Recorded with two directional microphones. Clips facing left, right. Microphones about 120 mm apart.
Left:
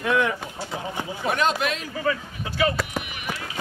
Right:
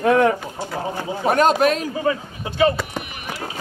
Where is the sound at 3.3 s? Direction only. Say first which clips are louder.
Right 6 dB; 35° right (ahead or behind).